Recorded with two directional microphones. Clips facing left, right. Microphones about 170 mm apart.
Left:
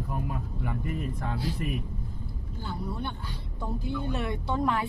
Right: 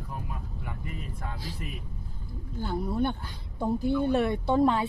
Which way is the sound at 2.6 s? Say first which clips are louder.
Right 7 dB; 45° right (ahead or behind).